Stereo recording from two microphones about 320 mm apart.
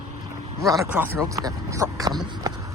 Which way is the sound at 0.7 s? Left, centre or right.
Centre.